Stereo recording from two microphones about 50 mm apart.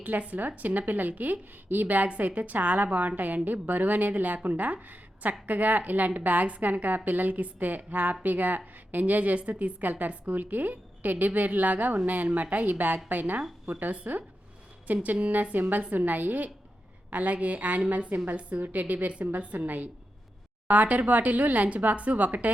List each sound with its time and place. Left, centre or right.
0.0 s a woman's voice: right